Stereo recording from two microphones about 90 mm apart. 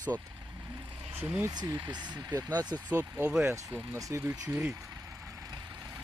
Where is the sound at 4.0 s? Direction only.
40° right (ahead or behind).